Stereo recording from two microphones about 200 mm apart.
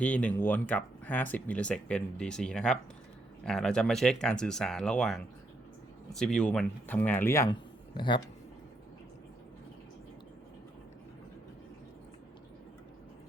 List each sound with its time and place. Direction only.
0.0 s speech: 5° left (ahead or behind); by 8.2 s 25° left (ahead or behind)